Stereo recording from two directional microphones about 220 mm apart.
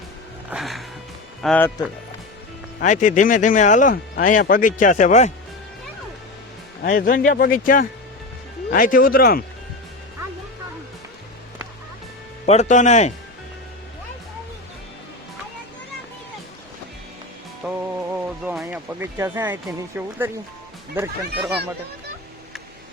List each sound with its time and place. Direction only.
0.5 s music: centre (ahead or behind)
1.4 s speech: 5° left (ahead or behind)
2.8 s speech: 35° left (ahead or behind)
6.8 s speech: 40° left (ahead or behind)
12.5 s speech: 30° left (ahead or behind)
17.6 s music: 5° right (ahead or behind)
20.0 s speech: 10° right (ahead or behind)